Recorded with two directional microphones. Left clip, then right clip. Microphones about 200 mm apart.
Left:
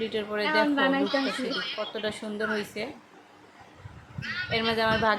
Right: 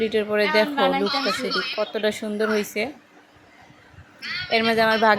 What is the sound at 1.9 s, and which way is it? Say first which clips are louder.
Speech: right 8 dB; 30° right (ahead or behind).